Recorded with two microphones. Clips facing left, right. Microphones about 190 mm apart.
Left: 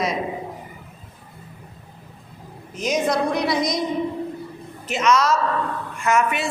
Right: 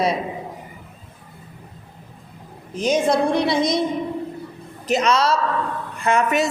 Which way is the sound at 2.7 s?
30° right (ahead or behind).